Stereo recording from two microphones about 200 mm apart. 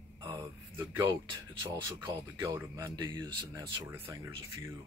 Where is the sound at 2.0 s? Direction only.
10° right (ahead or behind).